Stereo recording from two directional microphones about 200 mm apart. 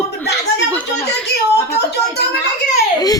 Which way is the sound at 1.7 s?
55° left (ahead or behind).